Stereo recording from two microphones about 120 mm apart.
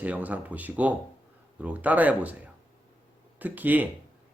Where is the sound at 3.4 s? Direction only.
15° right (ahead or behind).